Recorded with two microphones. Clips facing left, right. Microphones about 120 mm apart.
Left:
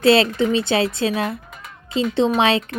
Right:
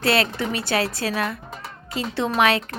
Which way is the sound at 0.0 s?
25° left (ahead or behind).